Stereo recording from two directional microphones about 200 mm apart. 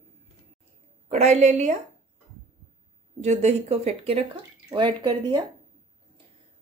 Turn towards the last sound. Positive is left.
turn(degrees=-20)  # may be behind; listen again after turning